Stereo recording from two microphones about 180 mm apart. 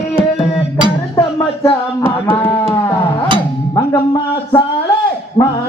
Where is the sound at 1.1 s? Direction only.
20° left (ahead or behind).